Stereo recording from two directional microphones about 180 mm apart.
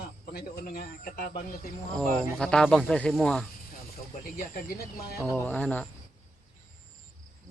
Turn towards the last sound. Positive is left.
turn(degrees=10)  # may be behind; listen again after turning